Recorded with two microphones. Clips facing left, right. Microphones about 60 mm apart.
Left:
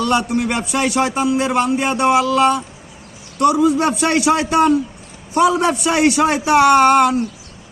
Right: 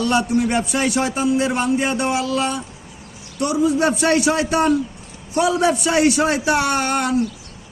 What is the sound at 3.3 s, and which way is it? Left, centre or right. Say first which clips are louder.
A man's voice: left 5 dB; left.